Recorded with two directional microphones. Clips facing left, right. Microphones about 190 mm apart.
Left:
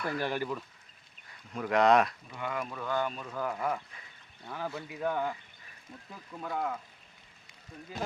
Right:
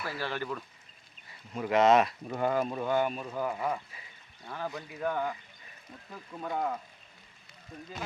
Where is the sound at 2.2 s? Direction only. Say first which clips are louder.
Right 8 dB; 40° right (ahead or behind); by 4.0 s 10° right (ahead or behind).